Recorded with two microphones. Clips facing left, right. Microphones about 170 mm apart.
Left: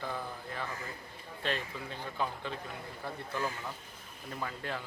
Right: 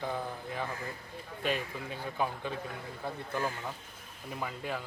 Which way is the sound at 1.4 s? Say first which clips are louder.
Right 3 dB; 10° right (ahead or behind).